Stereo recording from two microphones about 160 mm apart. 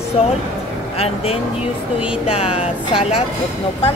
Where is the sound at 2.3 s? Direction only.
40° left (ahead or behind).